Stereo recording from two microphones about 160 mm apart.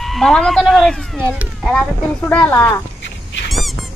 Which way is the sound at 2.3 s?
10° left (ahead or behind).